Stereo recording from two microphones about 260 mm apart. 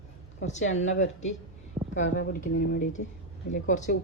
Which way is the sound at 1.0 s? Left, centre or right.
Left.